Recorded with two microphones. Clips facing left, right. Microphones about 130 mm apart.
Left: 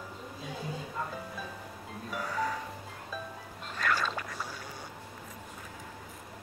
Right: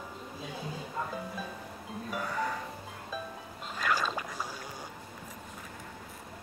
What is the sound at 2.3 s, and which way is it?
Speech, centre (ahead or behind).